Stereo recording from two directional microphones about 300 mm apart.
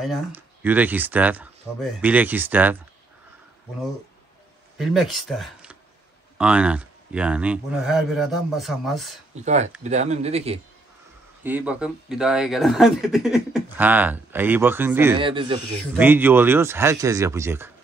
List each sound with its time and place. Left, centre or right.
0.0 s speech: centre
4.7 s speech: centre
9.3 s speech: right
11.4 s speech: centre